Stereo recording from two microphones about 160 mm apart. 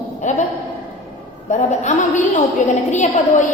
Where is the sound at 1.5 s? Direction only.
45° left (ahead or behind).